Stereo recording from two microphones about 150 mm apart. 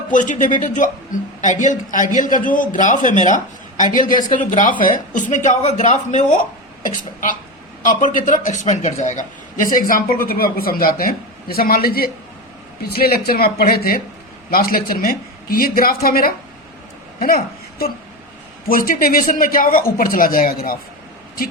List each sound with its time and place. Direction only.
0.1 s a woman's voice: 55° left (ahead or behind); by 17.9 s 90° left
18.7 s speech: 70° left (ahead or behind)